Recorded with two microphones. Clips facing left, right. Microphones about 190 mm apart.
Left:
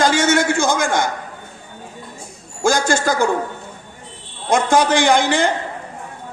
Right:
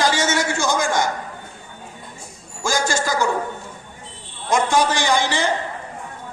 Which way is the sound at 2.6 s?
55° left (ahead or behind).